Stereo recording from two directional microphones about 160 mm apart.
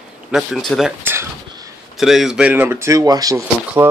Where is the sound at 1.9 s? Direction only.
Centre (ahead or behind); by 3.9 s 20° right (ahead or behind).